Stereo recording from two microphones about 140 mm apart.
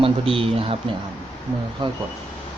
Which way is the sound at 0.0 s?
40° right (ahead or behind).